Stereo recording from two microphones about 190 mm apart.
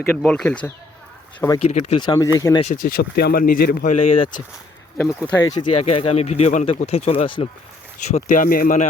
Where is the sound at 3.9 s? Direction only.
25° left (ahead or behind).